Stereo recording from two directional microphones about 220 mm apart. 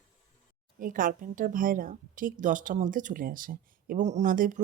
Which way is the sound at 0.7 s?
40° right (ahead or behind).